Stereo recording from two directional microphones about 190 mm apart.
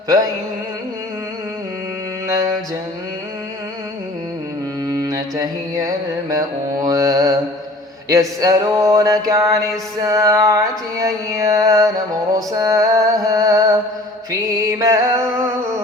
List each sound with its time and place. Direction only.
4.9 s mantra: 20° right (ahead or behind)
6.3 s music: 20° right (ahead or behind)